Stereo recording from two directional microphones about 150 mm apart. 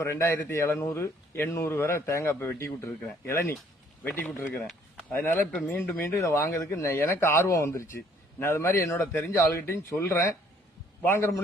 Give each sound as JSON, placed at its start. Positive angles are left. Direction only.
{"t": 0.0, "sound": "speech", "side_deg": 15}